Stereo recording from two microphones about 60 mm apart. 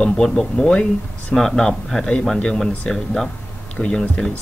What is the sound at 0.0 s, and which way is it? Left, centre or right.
Speech, centre.